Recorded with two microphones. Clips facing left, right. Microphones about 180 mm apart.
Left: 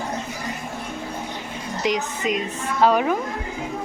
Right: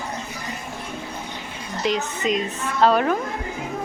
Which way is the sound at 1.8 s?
15° left (ahead or behind).